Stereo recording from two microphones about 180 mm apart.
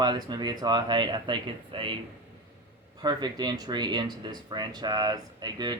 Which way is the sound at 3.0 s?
25° right (ahead or behind).